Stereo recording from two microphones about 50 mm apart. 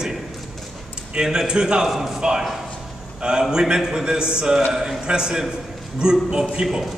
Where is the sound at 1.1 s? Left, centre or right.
Centre.